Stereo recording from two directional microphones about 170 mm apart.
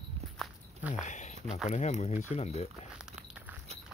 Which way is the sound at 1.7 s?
45° left (ahead or behind).